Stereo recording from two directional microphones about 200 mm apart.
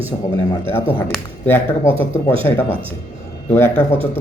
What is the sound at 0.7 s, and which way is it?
Speech, 10° left (ahead or behind).